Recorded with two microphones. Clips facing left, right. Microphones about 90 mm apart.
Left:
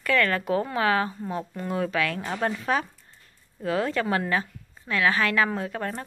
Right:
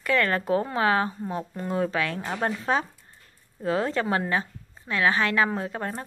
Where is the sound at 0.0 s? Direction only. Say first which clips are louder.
Even; 25° right (ahead or behind).